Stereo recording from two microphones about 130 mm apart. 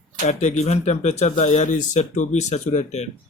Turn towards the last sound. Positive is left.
turn(degrees=60)  # may be behind; listen again after turning